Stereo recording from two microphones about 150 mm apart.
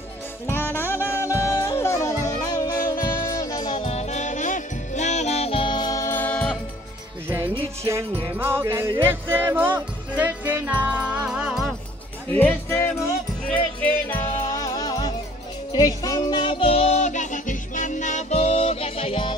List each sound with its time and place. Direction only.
0.5 s saxophone: 15° left (ahead or behind)
1.4 s music: 20° left (ahead or behind)
8.4 s music: 15° right (ahead or behind)
12.3 s music: 15° left (ahead or behind); by 19.3 s 35° left (ahead or behind)